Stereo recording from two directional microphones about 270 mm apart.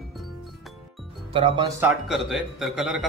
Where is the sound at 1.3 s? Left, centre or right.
Centre.